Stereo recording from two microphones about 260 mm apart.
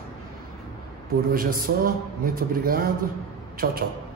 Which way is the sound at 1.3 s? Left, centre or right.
Right.